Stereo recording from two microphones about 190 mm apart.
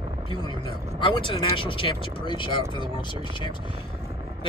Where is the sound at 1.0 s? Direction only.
25° left (ahead or behind).